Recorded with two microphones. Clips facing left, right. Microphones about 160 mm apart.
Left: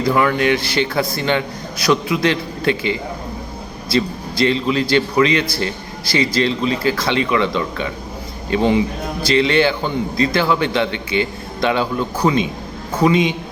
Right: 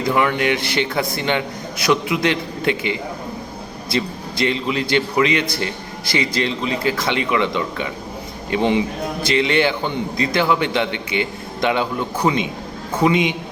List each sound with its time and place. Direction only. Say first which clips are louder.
0.0 s speech: left 2 dB; 20° right (ahead or behind)